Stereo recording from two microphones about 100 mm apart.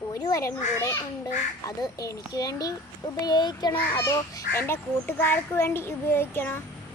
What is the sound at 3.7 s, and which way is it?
A child's voice, 30° left (ahead or behind).